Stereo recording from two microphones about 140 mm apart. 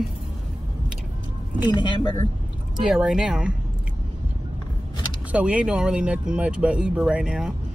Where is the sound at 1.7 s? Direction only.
30° left (ahead or behind).